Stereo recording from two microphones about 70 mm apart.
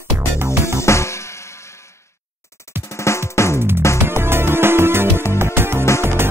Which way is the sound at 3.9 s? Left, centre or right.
Right.